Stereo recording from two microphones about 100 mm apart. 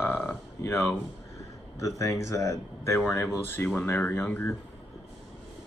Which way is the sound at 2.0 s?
30° left (ahead or behind).